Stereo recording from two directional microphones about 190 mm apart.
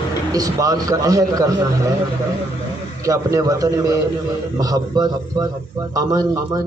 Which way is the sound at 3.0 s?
15° right (ahead or behind).